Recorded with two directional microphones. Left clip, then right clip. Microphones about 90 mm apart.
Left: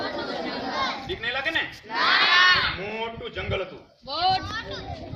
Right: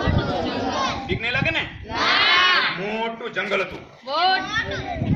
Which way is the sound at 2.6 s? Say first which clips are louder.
Right 4 dB; 5° left (ahead or behind).